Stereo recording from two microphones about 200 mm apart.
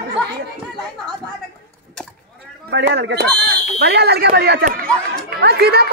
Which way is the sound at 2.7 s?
60° right (ahead or behind).